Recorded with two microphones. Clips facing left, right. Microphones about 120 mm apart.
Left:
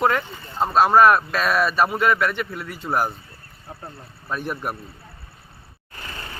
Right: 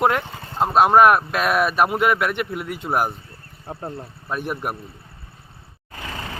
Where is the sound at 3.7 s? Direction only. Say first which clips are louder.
Right 6 dB; 65° right (ahead or behind).